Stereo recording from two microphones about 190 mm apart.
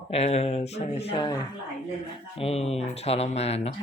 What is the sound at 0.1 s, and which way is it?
Speech, 35° left (ahead or behind).